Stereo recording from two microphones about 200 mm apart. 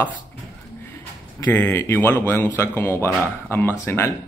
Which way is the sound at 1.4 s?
10° left (ahead or behind).